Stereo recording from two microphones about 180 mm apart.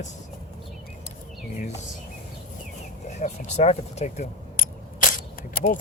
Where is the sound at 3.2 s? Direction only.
40° left (ahead or behind).